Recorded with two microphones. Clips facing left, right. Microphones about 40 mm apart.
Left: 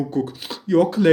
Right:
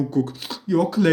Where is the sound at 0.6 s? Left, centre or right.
Left.